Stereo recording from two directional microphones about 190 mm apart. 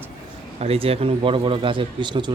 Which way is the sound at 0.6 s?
30° right (ahead or behind).